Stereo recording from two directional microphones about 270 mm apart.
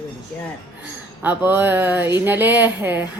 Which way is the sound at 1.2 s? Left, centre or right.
Centre.